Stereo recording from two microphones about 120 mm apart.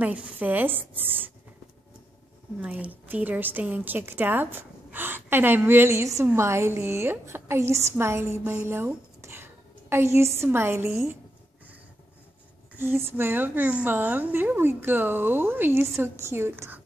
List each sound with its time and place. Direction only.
0.0 s a woman's voice: 10° right (ahead or behind)
2.6 s a woman's voice: 10° right (ahead or behind)
12.7 s a woman's voice: 20° right (ahead or behind)